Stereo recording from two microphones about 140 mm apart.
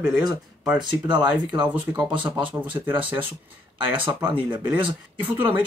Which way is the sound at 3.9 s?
35° right (ahead or behind).